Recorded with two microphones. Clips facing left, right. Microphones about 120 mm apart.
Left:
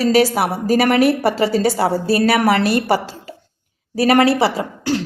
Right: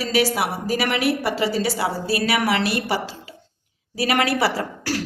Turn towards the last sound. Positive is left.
turn(degrees=20)  # may be behind; listen again after turning